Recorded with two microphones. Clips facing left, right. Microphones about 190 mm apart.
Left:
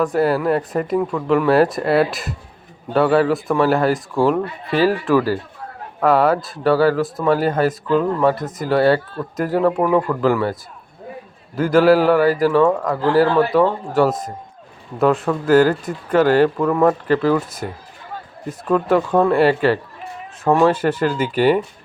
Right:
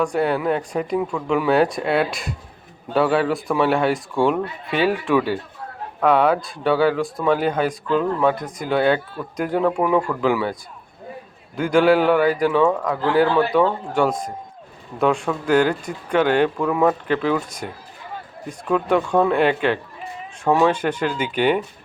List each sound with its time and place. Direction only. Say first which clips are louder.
0.0 s a man's voice: left 3 dB; 5° left (ahead or behind)